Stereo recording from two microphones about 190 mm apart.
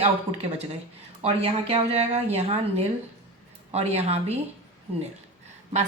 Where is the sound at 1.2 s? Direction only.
30° right (ahead or behind).